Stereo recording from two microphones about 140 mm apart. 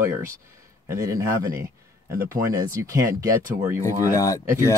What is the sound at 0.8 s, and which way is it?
Speech, 20° right (ahead or behind).